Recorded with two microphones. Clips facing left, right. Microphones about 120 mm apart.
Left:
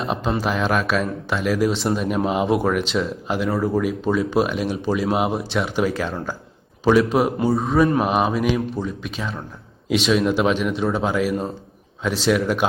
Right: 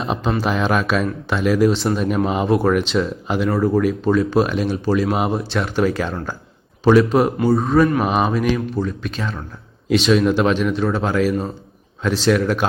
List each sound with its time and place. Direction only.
0.0 s speech: centre (ahead or behind)